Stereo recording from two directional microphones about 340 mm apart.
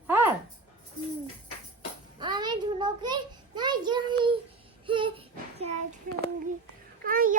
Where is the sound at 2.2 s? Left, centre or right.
Centre.